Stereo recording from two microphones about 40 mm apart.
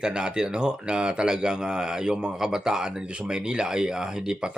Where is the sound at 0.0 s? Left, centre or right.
Right.